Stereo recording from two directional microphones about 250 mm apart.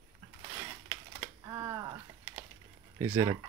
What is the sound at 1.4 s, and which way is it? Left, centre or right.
Speech, centre.